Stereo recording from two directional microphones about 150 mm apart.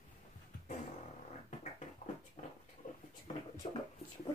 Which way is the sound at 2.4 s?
55° left (ahead or behind).